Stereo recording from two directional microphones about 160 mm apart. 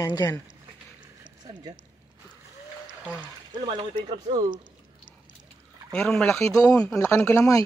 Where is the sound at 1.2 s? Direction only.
25° right (ahead or behind).